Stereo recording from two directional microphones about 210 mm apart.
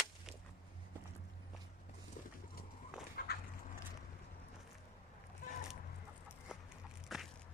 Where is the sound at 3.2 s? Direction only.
45° left (ahead or behind).